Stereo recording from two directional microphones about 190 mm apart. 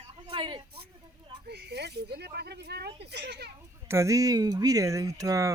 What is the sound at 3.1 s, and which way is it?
Children playing, 60° right (ahead or behind).